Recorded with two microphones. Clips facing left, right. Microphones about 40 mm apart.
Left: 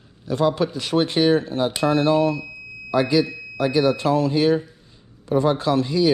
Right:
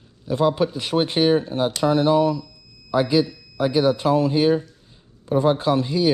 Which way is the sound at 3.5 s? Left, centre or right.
Right.